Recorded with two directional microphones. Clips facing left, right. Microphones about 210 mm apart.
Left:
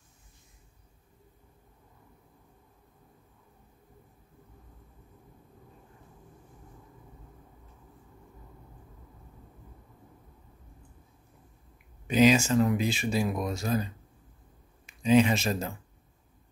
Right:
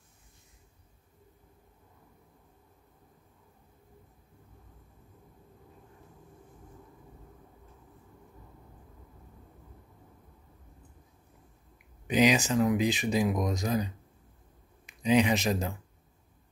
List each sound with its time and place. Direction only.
12.1 s speech: 15° right (ahead or behind)